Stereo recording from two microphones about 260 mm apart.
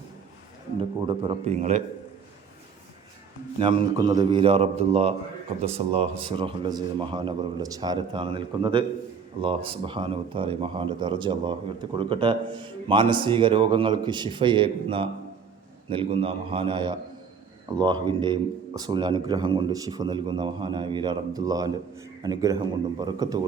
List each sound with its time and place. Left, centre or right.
0.8 s speech: centre
3.6 s a man's voice: centre